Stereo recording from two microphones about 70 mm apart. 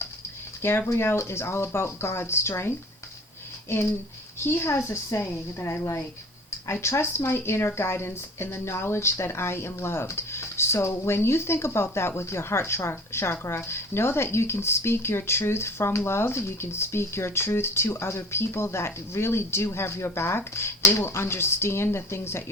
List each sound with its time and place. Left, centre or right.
0.6 s speech: left
6.8 s speech: left